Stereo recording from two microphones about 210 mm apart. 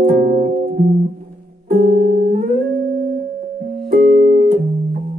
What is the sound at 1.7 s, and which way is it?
Music, 45° right (ahead or behind).